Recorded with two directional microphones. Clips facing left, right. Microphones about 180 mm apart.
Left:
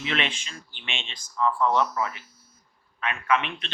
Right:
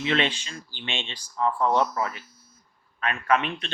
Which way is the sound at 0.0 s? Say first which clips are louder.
Right 4 dB; 35° right (ahead or behind).